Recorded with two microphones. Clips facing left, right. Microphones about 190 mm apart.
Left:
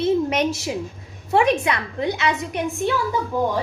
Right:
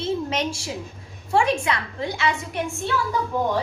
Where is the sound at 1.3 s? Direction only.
20° left (ahead or behind).